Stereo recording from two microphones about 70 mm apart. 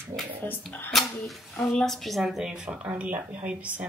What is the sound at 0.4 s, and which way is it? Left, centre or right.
Speech, left.